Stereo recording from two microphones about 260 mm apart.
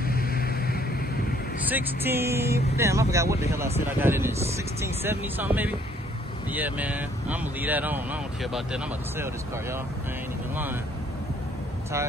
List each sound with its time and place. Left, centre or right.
0.0 s vehicle: left
1.7 s speech: centre